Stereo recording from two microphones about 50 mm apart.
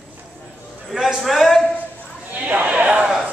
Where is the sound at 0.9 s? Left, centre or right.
Centre.